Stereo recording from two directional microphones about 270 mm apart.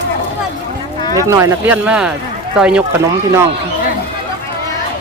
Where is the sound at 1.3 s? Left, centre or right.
Centre.